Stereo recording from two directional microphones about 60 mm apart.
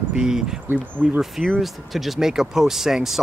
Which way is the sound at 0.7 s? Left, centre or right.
Right.